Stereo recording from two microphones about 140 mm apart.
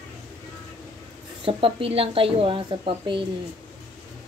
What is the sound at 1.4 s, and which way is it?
A woman's voice, 40° right (ahead or behind).